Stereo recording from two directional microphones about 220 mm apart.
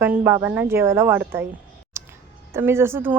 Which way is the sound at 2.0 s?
15° right (ahead or behind).